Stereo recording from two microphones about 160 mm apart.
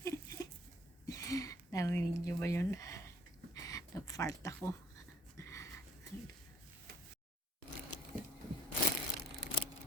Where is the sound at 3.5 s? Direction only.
20° left (ahead or behind).